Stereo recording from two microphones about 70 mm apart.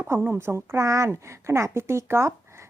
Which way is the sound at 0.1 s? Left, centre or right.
Right.